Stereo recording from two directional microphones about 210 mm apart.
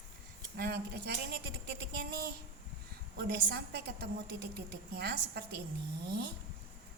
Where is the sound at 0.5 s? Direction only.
50° right (ahead or behind).